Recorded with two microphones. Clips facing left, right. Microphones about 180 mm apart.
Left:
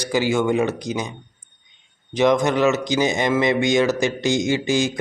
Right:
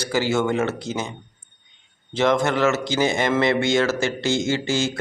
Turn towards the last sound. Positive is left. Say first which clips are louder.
# left 2 dB
turn(degrees=15)  # may be behind; listen again after turning